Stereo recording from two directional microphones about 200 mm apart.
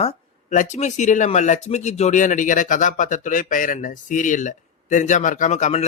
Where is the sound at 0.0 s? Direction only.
35° left (ahead or behind).